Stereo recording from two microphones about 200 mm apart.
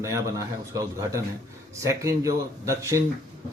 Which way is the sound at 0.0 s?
15° right (ahead or behind).